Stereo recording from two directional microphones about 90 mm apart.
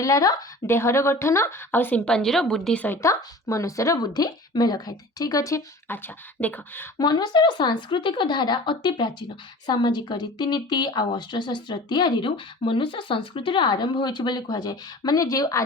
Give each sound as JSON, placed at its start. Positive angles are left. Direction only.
{"t": 0.0, "sound": "speech", "side_deg": 40}
{"t": 0.7, "sound": "a woman's voice", "side_deg": 30}
{"t": 2.0, "sound": "a woman's voice", "side_deg": 5}
{"t": 3.0, "sound": "speech", "side_deg": 35}
{"t": 4.0, "sound": "a woman's voice", "side_deg": 50}
{"t": 5.9, "sound": "a woman's voice", "side_deg": 25}
{"t": 7.0, "sound": "speech", "side_deg": 55}
{"t": 12.6, "sound": "speech", "side_deg": 70}